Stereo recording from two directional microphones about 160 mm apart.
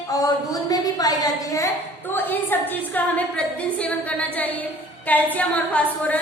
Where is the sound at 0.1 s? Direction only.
20° left (ahead or behind).